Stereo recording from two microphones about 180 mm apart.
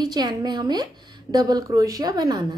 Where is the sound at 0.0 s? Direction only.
25° right (ahead or behind).